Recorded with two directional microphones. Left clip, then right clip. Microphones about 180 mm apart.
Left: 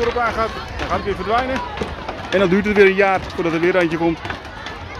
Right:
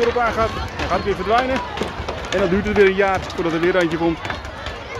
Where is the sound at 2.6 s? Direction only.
25° left (ahead or behind).